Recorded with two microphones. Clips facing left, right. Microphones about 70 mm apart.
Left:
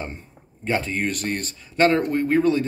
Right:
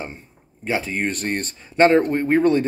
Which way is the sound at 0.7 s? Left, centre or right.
Centre.